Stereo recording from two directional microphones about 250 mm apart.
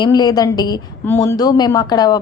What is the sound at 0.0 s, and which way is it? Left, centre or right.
A woman's voice, centre.